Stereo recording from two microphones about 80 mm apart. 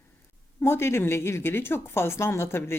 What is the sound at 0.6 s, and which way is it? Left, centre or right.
Speech, left.